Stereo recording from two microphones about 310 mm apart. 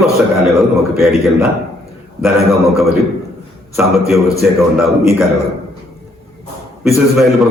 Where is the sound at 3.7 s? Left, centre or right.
Centre.